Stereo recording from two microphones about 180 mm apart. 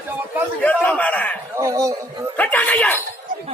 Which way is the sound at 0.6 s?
5° left (ahead or behind).